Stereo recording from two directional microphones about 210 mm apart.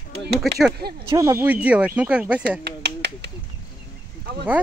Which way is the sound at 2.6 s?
55° right (ahead or behind).